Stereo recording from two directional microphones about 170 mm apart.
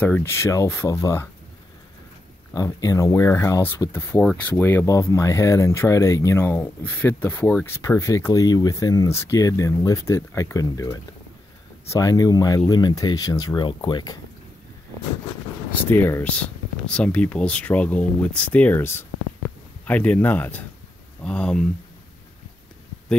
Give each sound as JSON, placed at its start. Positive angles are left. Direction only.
{"t": 0.0, "sound": "speech", "side_deg": 10}
{"t": 2.5, "sound": "speech", "side_deg": 20}
{"t": 15.9, "sound": "speech", "side_deg": 15}